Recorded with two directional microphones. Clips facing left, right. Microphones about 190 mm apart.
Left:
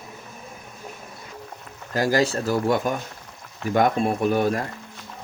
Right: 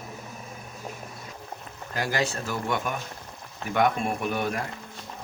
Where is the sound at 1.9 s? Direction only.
40° left (ahead or behind).